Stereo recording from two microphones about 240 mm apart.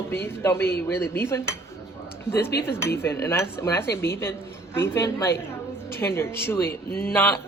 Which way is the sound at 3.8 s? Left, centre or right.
Left.